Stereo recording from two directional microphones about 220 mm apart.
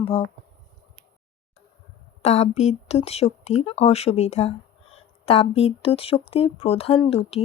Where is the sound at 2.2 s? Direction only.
30° left (ahead or behind).